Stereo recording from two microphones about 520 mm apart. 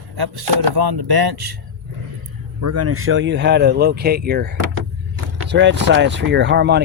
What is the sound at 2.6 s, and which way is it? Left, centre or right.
Speech, right.